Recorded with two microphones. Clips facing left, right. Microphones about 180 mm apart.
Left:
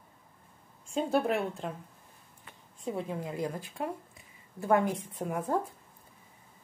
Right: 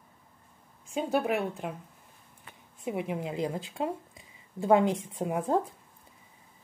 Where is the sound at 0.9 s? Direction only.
5° right (ahead or behind).